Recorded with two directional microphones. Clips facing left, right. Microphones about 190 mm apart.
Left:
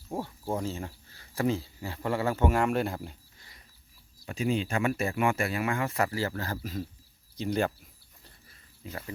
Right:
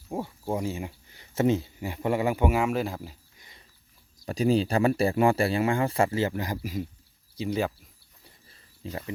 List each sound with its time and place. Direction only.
0.1 s speech: 5° right (ahead or behind)
0.5 s speech: 15° right (ahead or behind)
3.3 s dog: 20° right (ahead or behind)
4.3 s speech: 35° right (ahead or behind); by 7.7 s 5° right (ahead or behind)
8.8 s speech: 25° right (ahead or behind)